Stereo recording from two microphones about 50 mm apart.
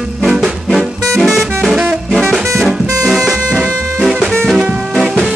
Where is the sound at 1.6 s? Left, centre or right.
Centre.